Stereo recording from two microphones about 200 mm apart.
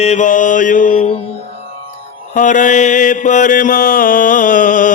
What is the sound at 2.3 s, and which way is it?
Mantra, 40° left (ahead or behind).